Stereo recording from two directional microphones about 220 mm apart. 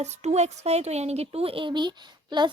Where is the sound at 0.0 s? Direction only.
30° right (ahead or behind).